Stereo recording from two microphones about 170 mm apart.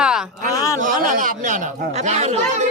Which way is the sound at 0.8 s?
50° right (ahead or behind).